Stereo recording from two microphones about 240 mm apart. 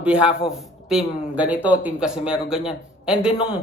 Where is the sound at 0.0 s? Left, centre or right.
Centre.